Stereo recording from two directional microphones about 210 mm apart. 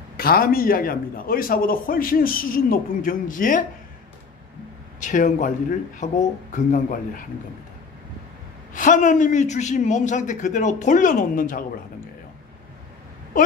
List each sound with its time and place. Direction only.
0.2 s a man's voice: 45° left (ahead or behind)
5.0 s a man's voice: 35° left (ahead or behind)
8.7 s a man's voice: 40° left (ahead or behind)